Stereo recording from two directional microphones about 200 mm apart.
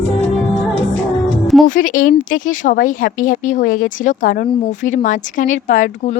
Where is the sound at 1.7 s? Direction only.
40° left (ahead or behind).